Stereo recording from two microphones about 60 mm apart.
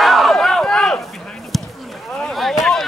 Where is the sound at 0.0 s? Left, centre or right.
Centre.